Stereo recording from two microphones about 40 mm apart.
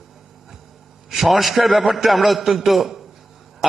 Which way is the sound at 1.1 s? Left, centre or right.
Centre.